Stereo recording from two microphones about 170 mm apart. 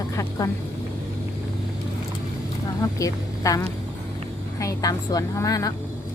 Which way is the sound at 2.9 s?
20° left (ahead or behind).